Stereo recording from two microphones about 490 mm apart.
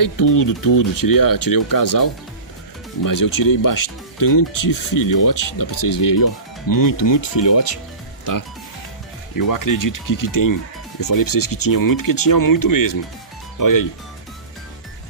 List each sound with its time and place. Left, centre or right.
0.0 s speech: left
7.3 s speech: left
9.3 s speech: left